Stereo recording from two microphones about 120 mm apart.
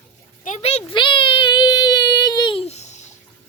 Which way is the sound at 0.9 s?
40° left (ahead or behind).